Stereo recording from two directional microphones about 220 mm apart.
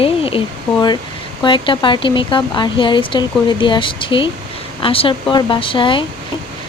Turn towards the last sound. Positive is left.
turn(degrees=20)  # may be behind; listen again after turning